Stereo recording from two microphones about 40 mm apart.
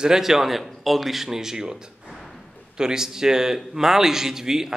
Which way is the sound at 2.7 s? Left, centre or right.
Centre.